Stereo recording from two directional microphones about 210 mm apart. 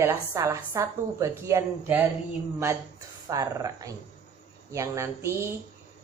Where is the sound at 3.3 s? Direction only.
15° right (ahead or behind).